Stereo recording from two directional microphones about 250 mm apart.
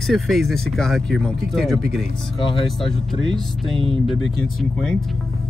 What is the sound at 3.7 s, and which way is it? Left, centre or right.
Speech, right.